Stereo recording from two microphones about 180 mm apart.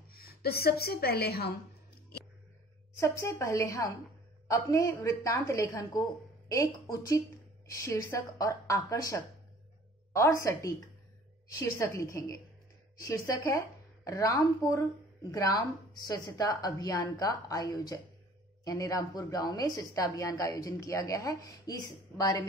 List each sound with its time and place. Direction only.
0.1 s a woman's voice: 60° left (ahead or behind)
3.0 s a woman's voice: 15° left (ahead or behind)